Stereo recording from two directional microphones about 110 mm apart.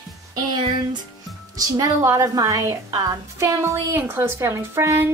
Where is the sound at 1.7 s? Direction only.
35° right (ahead or behind).